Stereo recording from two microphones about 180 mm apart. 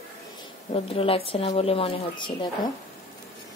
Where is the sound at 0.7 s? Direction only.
30° left (ahead or behind).